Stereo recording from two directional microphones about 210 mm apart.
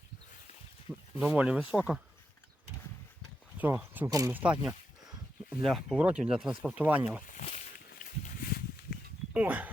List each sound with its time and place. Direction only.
0.9 s a sound: 5° right (ahead or behind)
1.2 s speech: 5° right (ahead or behind)
3.6 s speech: 10° right (ahead or behind)
7.3 s walk: 35° left (ahead or behind)
9.3 s speech: 5° right (ahead or behind)